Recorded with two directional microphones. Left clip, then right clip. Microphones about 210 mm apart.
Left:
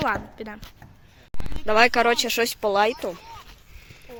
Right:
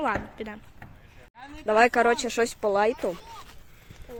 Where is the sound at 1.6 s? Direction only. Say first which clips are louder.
Left 2 dB; centre (ahead or behind).